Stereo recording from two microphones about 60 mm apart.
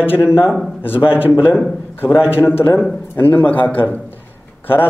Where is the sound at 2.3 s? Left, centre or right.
Left.